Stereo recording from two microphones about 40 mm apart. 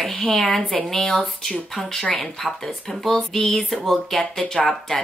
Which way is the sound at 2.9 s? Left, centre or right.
Centre.